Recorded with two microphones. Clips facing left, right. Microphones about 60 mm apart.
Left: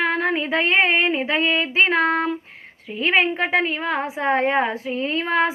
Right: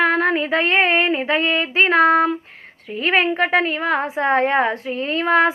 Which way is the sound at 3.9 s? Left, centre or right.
Centre.